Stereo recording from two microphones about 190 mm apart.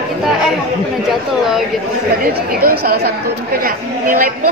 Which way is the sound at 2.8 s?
55° right (ahead or behind).